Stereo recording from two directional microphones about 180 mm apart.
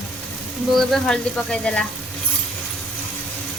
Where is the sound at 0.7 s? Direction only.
5° left (ahead or behind).